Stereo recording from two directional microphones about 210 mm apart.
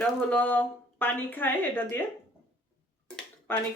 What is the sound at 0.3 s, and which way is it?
Speech, 5° left (ahead or behind).